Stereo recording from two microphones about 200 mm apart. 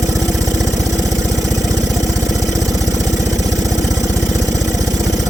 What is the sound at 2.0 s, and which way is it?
Engine, 15° right (ahead or behind).